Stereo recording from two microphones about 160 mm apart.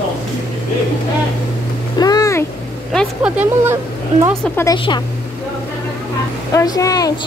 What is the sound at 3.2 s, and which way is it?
Speech, 10° right (ahead or behind).